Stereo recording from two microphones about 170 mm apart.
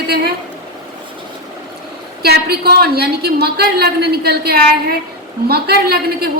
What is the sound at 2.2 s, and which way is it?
A woman's voice, 70° right (ahead or behind).